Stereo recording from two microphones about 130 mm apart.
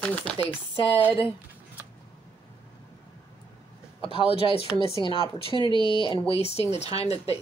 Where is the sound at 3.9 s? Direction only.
45° left (ahead or behind).